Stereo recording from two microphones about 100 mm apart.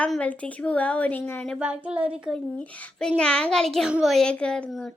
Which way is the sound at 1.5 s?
10° right (ahead or behind).